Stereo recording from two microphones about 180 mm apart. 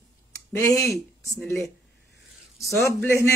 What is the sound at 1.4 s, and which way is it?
Speech, 5° left (ahead or behind).